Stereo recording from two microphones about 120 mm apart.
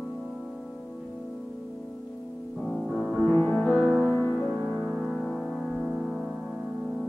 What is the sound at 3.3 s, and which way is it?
Music, 15° left (ahead or behind).